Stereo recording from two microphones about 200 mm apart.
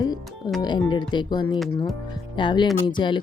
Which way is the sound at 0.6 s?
20° left (ahead or behind).